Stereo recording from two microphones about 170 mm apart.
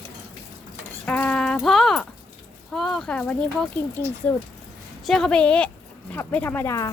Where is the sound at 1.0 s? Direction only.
10° left (ahead or behind).